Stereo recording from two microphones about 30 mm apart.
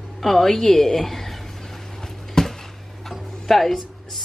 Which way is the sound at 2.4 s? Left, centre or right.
Centre.